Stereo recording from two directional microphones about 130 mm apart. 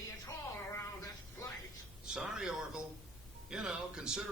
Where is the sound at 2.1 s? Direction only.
5° right (ahead or behind).